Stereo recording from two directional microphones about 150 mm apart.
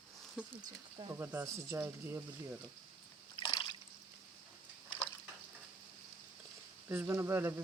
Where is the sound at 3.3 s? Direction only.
30° left (ahead or behind).